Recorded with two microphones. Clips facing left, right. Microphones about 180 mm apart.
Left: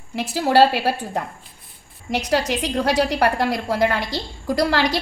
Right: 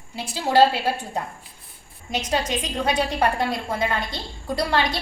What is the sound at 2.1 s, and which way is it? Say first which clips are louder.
A woman's voice: left 4 dB; 70° left (ahead or behind).